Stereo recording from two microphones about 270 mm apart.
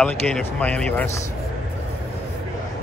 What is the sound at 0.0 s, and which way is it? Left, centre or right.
Speech, centre.